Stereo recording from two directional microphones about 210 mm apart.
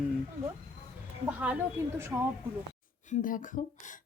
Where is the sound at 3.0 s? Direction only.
40° left (ahead or behind).